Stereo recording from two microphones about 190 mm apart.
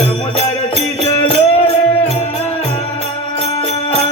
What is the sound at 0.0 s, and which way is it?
Music, 30° left (ahead or behind).